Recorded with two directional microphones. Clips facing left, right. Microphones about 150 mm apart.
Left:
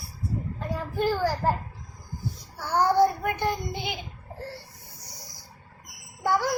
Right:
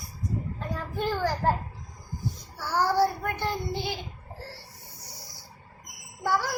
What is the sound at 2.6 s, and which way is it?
Child singing, 15° left (ahead or behind).